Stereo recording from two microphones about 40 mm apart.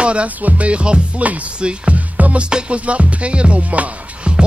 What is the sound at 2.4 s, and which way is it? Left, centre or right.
Music, right.